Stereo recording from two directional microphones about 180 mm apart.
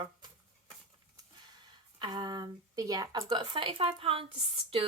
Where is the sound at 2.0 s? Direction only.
25° right (ahead or behind).